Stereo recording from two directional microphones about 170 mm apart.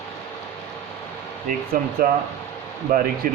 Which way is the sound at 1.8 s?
55° right (ahead or behind).